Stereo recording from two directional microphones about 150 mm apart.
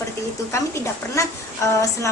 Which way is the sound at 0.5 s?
20° left (ahead or behind).